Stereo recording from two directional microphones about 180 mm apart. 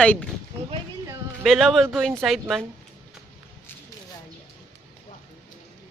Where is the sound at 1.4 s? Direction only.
Centre (ahead or behind).